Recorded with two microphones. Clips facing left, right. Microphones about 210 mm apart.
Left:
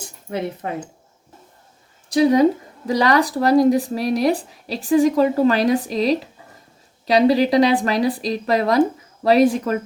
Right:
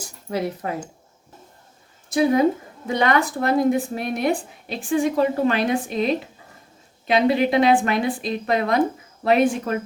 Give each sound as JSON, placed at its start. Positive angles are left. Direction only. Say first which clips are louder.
{"t": 0.3, "sound": "speech", "louder": "even", "side_deg": 25}
{"t": 2.1, "sound": "speech", "louder": "left 3 dB", "side_deg": 35}